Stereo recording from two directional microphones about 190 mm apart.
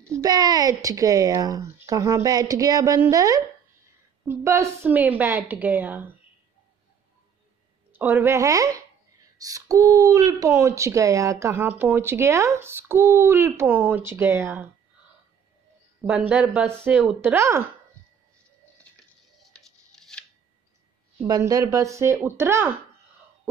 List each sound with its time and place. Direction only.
0.2 s speech: 20° right (ahead or behind)
7.9 s speech: 10° right (ahead or behind)
16.1 s speech: 5° right (ahead or behind)
19.5 s a sound: 5° left (ahead or behind)
21.2 s speech: 15° right (ahead or behind)